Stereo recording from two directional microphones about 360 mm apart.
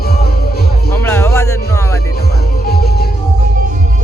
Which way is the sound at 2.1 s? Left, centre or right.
Left.